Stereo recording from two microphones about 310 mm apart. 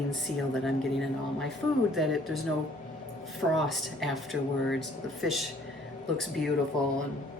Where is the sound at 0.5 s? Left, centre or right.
Centre.